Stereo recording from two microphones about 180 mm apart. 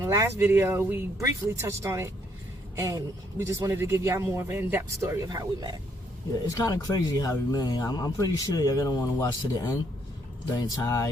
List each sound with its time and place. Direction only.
0.0 s speech: 15° right (ahead or behind)
6.5 s speech: 20° left (ahead or behind)
10.8 s speech: 15° left (ahead or behind)